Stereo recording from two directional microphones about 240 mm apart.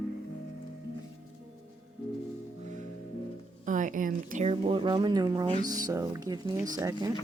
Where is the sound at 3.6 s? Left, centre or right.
Right; by 7.1 s centre.